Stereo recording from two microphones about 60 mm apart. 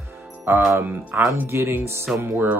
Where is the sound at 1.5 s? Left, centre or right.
Right.